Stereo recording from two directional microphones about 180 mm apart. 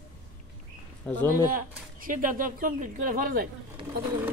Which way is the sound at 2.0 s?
50° right (ahead or behind).